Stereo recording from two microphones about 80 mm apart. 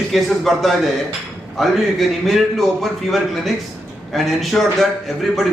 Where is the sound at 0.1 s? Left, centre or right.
Centre.